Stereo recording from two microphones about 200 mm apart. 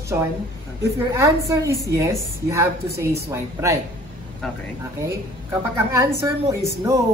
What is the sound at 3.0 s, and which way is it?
Speech, 15° right (ahead or behind).